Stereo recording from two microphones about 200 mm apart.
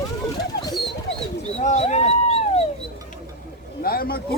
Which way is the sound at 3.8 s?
50° left (ahead or behind).